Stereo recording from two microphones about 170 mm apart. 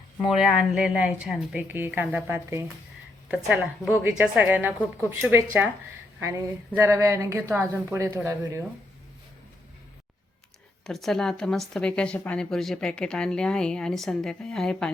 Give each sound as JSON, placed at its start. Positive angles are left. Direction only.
{"t": 0.3, "sound": "a woman's voice", "side_deg": -5}
{"t": 10.8, "sound": "speech", "side_deg": 0}